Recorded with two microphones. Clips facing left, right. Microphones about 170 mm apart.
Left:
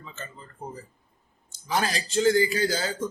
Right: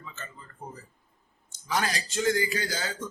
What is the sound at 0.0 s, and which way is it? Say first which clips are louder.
A man's voice: left 3 dB; 30° left (ahead or behind).